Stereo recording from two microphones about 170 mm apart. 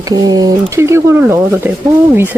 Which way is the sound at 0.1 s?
20° right (ahead or behind).